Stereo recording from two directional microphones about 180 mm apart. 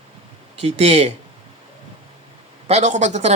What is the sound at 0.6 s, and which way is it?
Speech, 35° right (ahead or behind).